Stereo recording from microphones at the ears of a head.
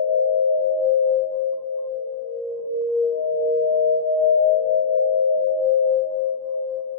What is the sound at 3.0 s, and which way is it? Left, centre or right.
Singing bowl, left.